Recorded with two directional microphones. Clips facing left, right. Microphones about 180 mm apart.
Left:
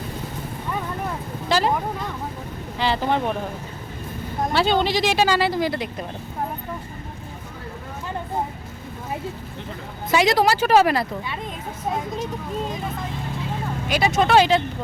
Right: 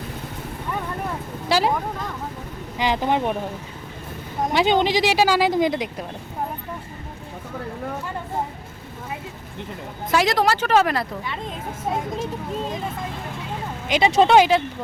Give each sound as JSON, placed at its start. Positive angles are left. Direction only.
{"t": 1.5, "sound": "vehicle", "side_deg": -10}
{"t": 2.7, "sound": "speech", "side_deg": -15}
{"t": 4.5, "sound": "speech", "side_deg": -15}
{"t": 10.1, "sound": "a woman's voice", "side_deg": 0}
{"t": 13.8, "sound": "speech", "side_deg": -20}